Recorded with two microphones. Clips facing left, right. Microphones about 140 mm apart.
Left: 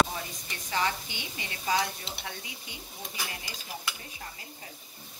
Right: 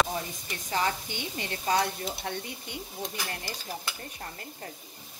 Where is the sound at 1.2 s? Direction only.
50° right (ahead or behind).